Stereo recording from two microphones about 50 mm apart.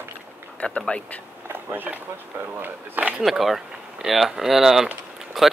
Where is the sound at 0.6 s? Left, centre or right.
Left.